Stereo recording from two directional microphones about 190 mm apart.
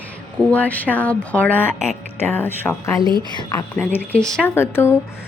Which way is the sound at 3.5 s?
10° left (ahead or behind).